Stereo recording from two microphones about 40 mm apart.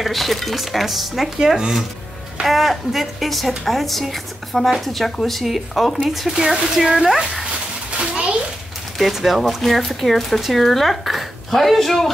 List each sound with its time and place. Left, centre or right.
0.0 s a woman's voice: centre
2.4 s a woman's voice: centre
8.0 s a sound: right
9.1 s a woman's voice: centre